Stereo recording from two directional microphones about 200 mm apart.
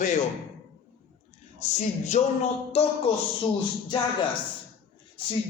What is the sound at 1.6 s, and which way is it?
Speech, 35° left (ahead or behind).